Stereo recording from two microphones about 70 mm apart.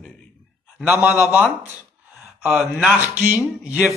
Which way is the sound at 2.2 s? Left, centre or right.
Centre.